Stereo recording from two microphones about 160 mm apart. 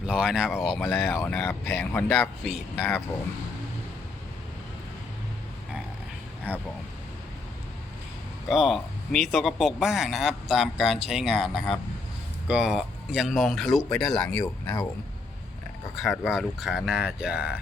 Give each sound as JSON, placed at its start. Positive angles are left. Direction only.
{"t": 0.0, "sound": "speech", "side_deg": -5}
{"t": 0.8, "sound": "speech", "side_deg": 10}
{"t": 6.5, "sound": "speech", "side_deg": -10}
{"t": 8.4, "sound": "speech", "side_deg": 0}
{"t": 14.4, "sound": "speech", "side_deg": 25}
{"t": 16.0, "sound": "speech", "side_deg": 0}